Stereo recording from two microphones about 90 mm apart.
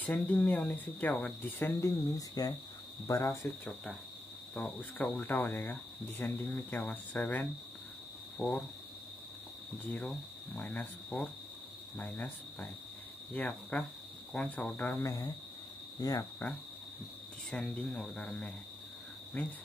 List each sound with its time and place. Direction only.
0.0 s speech: 20° left (ahead or behind)
1.8 s speech: 35° left (ahead or behind)
3.1 s speech: 30° left (ahead or behind)
4.6 s speech: 15° left (ahead or behind)
10.5 s speech: 20° left (ahead or behind)
13.3 s speech: 15° left (ahead or behind)
15.0 s speech: 40° left (ahead or behind)
17.5 s speech: 10° left (ahead or behind)